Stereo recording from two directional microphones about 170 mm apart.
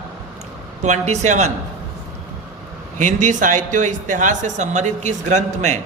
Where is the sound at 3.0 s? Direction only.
50° right (ahead or behind).